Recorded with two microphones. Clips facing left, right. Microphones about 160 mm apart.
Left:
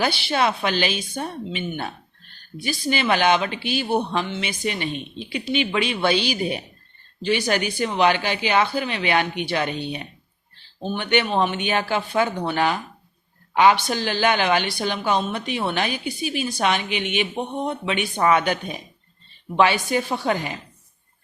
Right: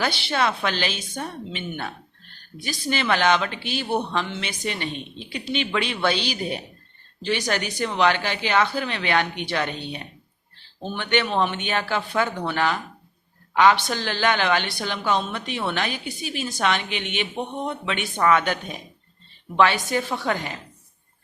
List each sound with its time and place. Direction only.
0.0 s a woman's voice: 15° left (ahead or behind)